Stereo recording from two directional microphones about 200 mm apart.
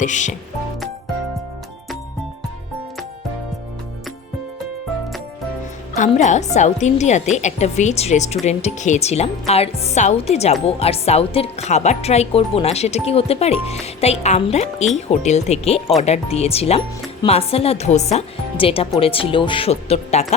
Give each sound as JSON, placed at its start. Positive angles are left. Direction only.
{"t": 0.0, "sound": "speech", "side_deg": 40}
{"t": 6.0, "sound": "speech", "side_deg": 35}